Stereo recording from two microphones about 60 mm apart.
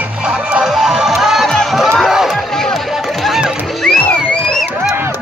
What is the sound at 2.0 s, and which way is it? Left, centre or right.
Run, centre.